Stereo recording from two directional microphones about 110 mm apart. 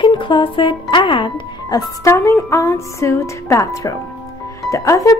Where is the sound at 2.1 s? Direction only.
25° left (ahead or behind).